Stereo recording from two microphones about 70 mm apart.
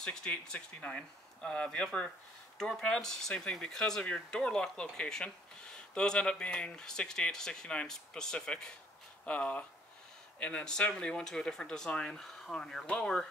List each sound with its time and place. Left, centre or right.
0.0 s speech: centre